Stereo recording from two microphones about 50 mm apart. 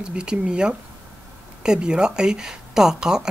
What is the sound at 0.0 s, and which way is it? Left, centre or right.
Speech, centre.